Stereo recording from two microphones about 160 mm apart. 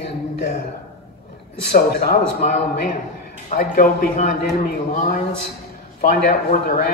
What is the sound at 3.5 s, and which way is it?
Speech, 65° left (ahead or behind).